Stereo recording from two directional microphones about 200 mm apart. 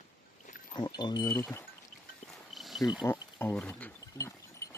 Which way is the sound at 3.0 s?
15° left (ahead or behind).